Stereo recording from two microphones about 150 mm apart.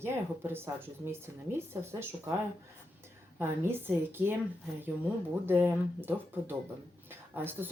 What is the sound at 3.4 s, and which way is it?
Speech, 15° right (ahead or behind).